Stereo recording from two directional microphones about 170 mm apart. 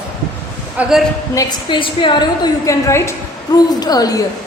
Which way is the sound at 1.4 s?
25° left (ahead or behind).